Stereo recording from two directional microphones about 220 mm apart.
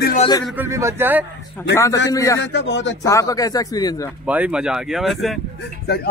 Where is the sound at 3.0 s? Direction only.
15° left (ahead or behind).